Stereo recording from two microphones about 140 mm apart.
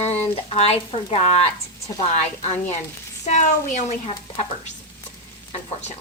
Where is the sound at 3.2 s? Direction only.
60° left (ahead or behind).